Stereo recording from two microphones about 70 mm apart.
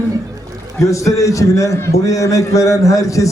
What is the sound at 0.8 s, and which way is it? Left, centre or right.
A man's voice, left.